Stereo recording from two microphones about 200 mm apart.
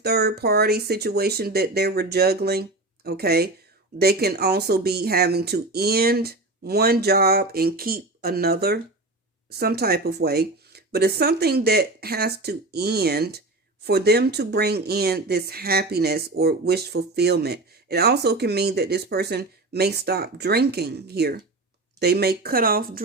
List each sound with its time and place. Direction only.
0.0 s speech: 55° right (ahead or behind)